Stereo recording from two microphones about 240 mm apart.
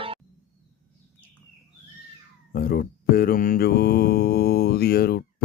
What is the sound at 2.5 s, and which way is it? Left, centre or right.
Mantra, left.